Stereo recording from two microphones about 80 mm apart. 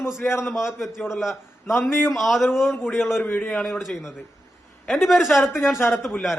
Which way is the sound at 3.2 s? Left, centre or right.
Left.